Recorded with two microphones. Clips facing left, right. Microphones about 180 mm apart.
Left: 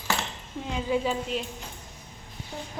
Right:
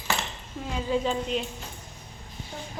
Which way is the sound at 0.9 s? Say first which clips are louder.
Right 1 dB; 5° left (ahead or behind).